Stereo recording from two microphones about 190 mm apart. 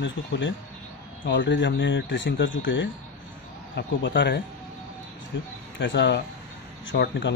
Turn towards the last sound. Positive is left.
turn(degrees=70)  # may be behind; listen again after turning